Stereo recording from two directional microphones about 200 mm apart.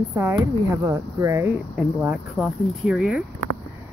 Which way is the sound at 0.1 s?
15° right (ahead or behind).